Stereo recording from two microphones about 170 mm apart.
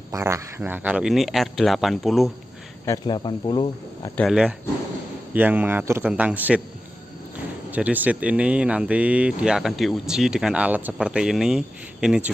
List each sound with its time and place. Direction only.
0.1 s speech: 15° right (ahead or behind); by 2.3 s centre (ahead or behind)
2.8 s speech: 25° left (ahead or behind)
4.2 s speech: 5° right (ahead or behind)
7.7 s speech: 10° right (ahead or behind)